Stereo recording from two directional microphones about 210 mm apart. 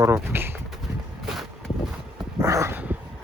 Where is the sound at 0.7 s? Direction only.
Centre (ahead or behind).